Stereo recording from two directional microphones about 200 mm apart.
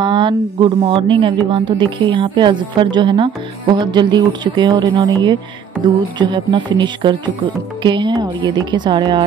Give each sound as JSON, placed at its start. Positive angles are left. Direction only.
{"t": 0.0, "sound": "speech", "side_deg": -25}